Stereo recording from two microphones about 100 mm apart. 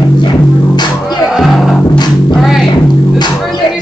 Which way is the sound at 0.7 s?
45° left (ahead or behind).